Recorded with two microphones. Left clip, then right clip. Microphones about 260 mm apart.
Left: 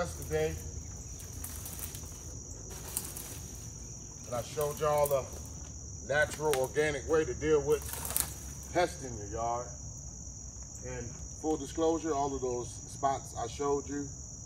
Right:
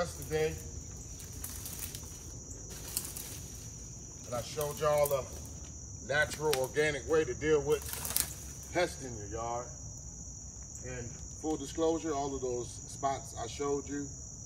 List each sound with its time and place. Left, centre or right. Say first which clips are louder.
0.0 s cricket: even; centre
4.3 s speech: left 2 dB; centre
11.4 s speech: left 2 dB; centre